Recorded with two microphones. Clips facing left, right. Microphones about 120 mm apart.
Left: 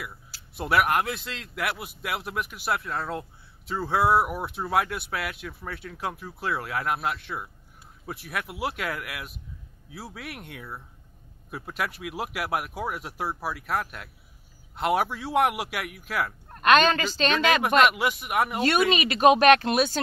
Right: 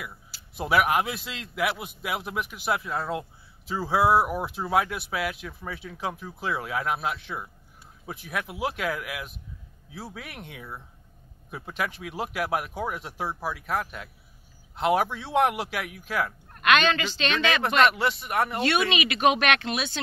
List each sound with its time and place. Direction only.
0.6 s speech: centre (ahead or behind)
16.6 s speech: 40° left (ahead or behind)
17.8 s speech: 10° left (ahead or behind)
18.9 s speech: 40° left (ahead or behind)